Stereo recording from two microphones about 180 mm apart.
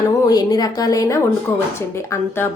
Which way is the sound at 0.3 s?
20° left (ahead or behind).